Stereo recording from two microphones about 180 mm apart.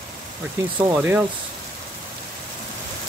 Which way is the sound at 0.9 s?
10° right (ahead or behind).